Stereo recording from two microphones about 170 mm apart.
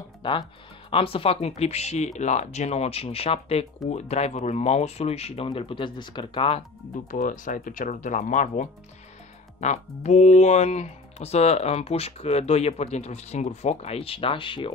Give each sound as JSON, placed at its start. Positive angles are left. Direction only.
{"t": 0.2, "sound": "speech", "side_deg": 30}
{"t": 7.1, "sound": "speech", "side_deg": 50}